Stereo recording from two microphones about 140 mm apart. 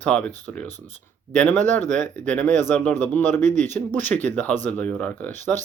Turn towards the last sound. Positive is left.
turn(degrees=15)  # may be behind; listen again after turning